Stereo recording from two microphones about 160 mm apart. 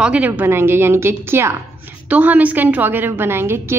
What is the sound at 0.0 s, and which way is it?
A woman's voice, 5° right (ahead or behind).